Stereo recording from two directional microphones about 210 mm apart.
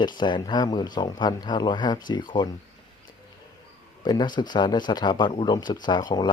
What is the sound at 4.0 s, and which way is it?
Speech, 20° left (ahead or behind).